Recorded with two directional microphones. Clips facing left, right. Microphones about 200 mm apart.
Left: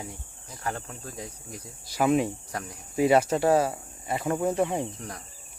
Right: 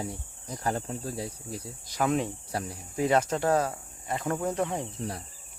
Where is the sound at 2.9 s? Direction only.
10° left (ahead or behind).